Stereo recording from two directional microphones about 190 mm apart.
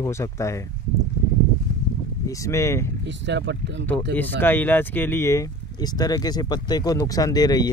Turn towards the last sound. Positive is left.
turn(degrees=20)  # may be behind; listen again after turning